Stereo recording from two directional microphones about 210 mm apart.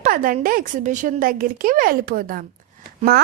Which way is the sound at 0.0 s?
40° right (ahead or behind).